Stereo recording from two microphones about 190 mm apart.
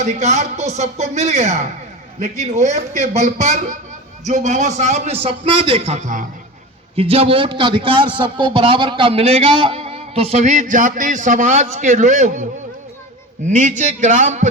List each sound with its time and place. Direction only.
0.0 s a man's voice: 35° right (ahead or behind)
6.9 s a man's voice: 30° right (ahead or behind)
13.5 s a man's voice: 40° right (ahead or behind)